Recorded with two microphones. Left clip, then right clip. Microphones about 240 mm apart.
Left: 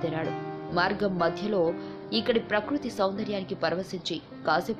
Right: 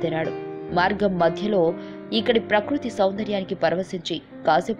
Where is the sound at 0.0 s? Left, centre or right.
Centre.